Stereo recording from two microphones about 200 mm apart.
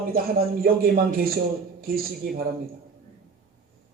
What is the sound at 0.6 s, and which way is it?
A man's voice, 45° right (ahead or behind).